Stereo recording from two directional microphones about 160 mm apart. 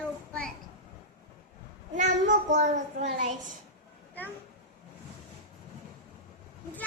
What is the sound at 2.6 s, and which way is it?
Speech, 45° right (ahead or behind).